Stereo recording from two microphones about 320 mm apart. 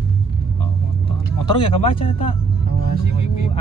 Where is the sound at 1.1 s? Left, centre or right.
Centre.